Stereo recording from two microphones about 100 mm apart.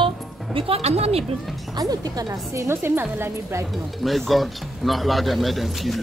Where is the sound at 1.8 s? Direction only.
40° right (ahead or behind); by 3.6 s 25° right (ahead or behind).